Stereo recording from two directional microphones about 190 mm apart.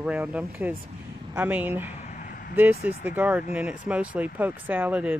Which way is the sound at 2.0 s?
45° left (ahead or behind).